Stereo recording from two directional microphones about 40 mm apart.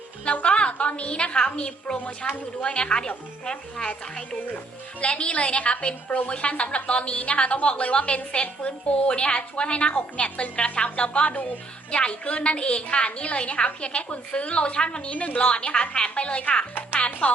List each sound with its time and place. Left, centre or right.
0.3 s a woman's voice: left
2.2 s a woman's voice: left
2.6 s a woman's voice: left